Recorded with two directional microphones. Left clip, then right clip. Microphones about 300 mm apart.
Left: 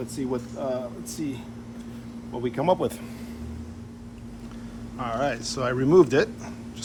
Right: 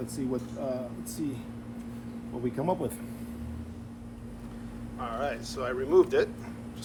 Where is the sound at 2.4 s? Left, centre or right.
Centre.